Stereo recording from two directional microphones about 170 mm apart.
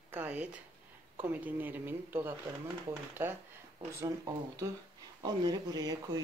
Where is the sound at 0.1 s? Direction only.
10° right (ahead or behind).